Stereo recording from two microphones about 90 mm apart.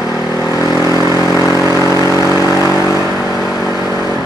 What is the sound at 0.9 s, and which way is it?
Vehicle, 40° left (ahead or behind).